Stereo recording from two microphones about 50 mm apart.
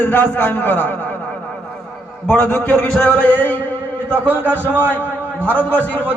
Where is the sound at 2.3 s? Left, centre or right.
Left.